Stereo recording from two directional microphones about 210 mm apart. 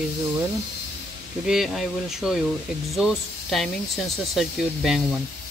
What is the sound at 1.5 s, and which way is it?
Speech, centre (ahead or behind).